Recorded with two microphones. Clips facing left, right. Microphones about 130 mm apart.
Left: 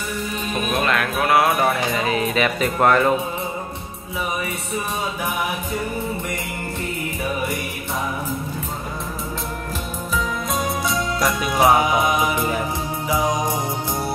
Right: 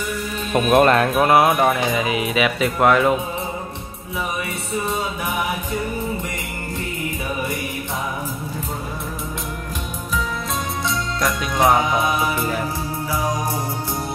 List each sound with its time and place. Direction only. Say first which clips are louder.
0.7 s speech: right 9 dB; 55° right (ahead or behind)
0.9 s music: right 3 dB; 30° right (ahead or behind)
1.6 s speech: right 2 dB; 10° right (ahead or behind)
11.1 s music: left 1 dB; 5° left (ahead or behind)